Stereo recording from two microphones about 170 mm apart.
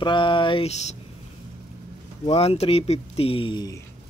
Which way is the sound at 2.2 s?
35° left (ahead or behind).